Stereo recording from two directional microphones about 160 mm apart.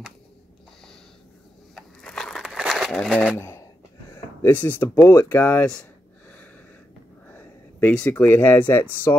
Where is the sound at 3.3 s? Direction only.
15° left (ahead or behind).